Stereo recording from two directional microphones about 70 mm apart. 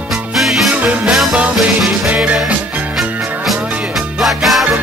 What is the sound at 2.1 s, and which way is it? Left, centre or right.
Music, centre.